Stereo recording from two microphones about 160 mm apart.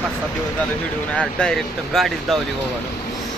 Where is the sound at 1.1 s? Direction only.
5° left (ahead or behind).